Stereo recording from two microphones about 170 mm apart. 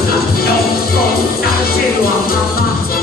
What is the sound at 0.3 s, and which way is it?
Music, 65° left (ahead or behind).